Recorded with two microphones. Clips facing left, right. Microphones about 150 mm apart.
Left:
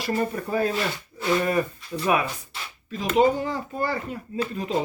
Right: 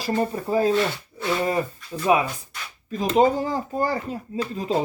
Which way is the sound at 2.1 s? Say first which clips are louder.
Right 4 dB; 25° right (ahead or behind).